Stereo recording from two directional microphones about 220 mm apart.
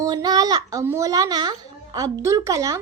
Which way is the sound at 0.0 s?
15° right (ahead or behind).